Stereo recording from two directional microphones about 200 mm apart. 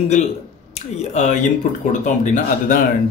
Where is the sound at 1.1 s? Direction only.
35° left (ahead or behind).